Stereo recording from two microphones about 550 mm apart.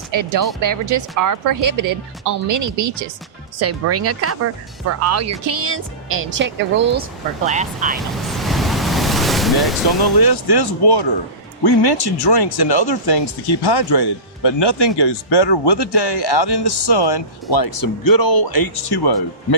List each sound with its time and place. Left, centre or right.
0.1 s speech: right; by 7.9 s centre
7.9 s waves: centre
10.0 s speech: left